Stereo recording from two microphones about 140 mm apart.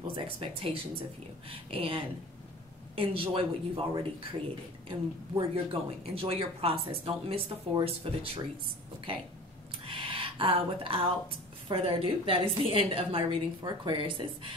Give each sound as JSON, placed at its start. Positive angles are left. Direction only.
{"t": 0.0, "sound": "speech", "side_deg": -40}
{"t": 9.8, "sound": "a sound", "side_deg": -40}
{"t": 11.7, "sound": "speech", "side_deg": -40}